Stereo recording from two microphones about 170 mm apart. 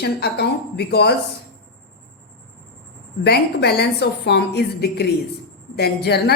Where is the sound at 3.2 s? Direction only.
75° left (ahead or behind).